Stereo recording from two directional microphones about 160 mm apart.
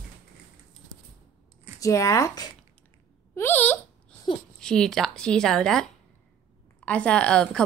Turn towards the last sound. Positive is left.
turn(degrees=5)  # may be behind; listen again after turning